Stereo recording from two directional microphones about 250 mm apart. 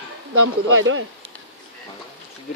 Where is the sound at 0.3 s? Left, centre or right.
Right.